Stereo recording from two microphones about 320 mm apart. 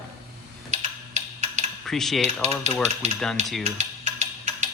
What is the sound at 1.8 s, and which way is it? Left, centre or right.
Speech, centre.